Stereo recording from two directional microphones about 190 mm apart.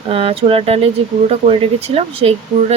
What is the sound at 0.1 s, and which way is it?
Speech, 30° right (ahead or behind).